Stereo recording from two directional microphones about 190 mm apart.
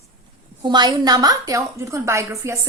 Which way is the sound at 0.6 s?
20° right (ahead or behind).